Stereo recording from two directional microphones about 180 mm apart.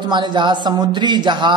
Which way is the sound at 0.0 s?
25° right (ahead or behind).